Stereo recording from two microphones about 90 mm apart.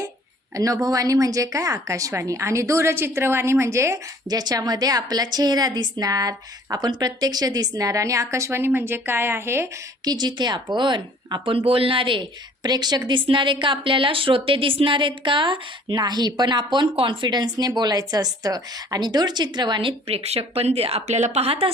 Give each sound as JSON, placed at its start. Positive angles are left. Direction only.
{"t": 0.5, "sound": "a woman's voice", "side_deg": -40}
{"t": 4.3, "sound": "a woman's voice", "side_deg": -45}
{"t": 10.0, "sound": "a woman's voice", "side_deg": -50}
{"t": 13.1, "sound": "a woman's voice", "side_deg": -65}
{"t": 20.6, "sound": "speech", "side_deg": -90}